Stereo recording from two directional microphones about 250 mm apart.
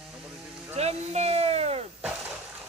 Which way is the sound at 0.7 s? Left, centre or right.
Right.